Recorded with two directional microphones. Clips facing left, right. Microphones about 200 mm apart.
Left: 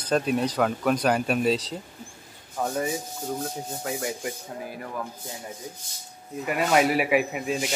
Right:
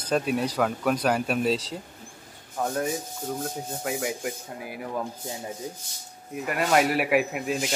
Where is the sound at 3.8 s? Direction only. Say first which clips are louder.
Right 1 dB; 5° right (ahead or behind).